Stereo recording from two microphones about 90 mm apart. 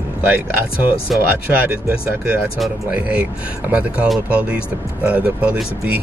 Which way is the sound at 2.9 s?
15° right (ahead or behind).